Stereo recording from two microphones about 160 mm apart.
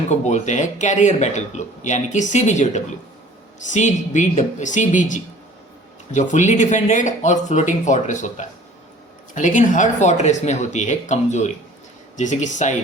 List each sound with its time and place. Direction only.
0.1 s speech: 45° left (ahead or behind)